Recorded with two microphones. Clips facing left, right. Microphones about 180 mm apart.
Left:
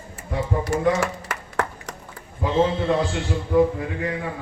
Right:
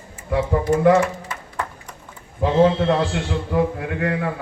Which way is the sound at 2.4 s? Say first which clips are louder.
Right 4 dB; 70° right (ahead or behind).